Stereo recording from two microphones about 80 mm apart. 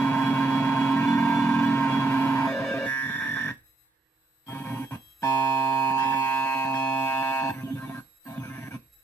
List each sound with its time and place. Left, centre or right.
0.0 s a sound: left
1.1 s music: left
2.7 s cacophony: left
4.5 s music: left
5.9 s music: left